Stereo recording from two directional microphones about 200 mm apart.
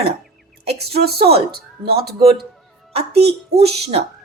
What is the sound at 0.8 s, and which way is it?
Speech, 50° right (ahead or behind).